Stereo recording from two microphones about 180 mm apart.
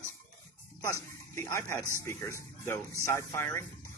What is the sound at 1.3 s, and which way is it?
Speech, 15° left (ahead or behind).